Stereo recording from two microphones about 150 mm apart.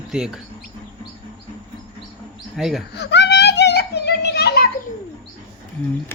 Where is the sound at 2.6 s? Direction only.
5° right (ahead or behind).